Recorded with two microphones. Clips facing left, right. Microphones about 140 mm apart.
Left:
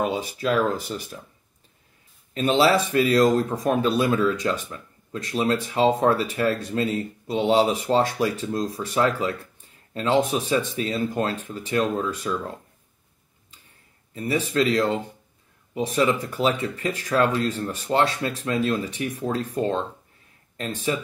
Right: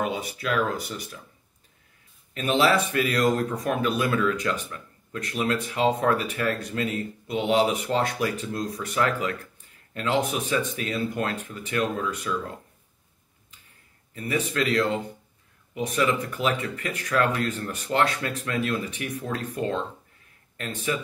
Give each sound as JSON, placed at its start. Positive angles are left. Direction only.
{"t": 0.0, "sound": "speech", "side_deg": 30}
{"t": 2.3, "sound": "speech", "side_deg": 30}
{"t": 14.1, "sound": "speech", "side_deg": 25}
{"t": 19.1, "sound": "speech", "side_deg": 35}
{"t": 20.9, "sound": "speech", "side_deg": 30}